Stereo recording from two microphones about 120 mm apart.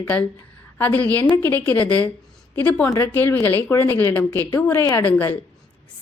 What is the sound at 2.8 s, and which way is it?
A woman's voice, 25° left (ahead or behind).